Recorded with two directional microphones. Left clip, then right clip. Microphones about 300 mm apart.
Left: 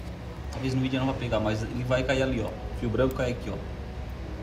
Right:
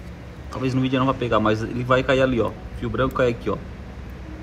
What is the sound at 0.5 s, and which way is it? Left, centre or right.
A man's voice, centre.